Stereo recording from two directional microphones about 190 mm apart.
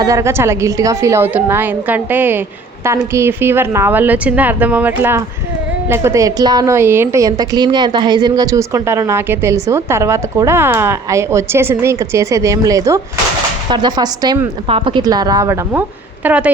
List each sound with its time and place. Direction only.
0.0 s a woman's voice: 15° right (ahead or behind)